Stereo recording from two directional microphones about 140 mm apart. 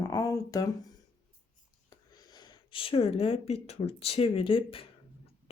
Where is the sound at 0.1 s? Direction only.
25° left (ahead or behind).